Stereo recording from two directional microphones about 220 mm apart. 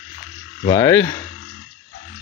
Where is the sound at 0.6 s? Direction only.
15° left (ahead or behind).